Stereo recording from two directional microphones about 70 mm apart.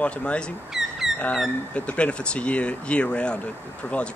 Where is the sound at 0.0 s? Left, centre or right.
Centre.